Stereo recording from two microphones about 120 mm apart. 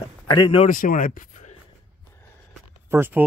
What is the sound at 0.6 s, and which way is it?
Speech, 90° left.